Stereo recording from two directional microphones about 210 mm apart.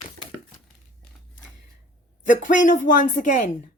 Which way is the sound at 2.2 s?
35° left (ahead or behind).